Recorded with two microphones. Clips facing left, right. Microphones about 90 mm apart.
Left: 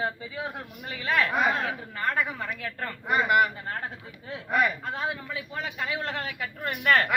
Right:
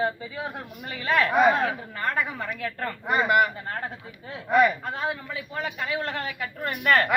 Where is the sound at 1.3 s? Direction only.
10° right (ahead or behind).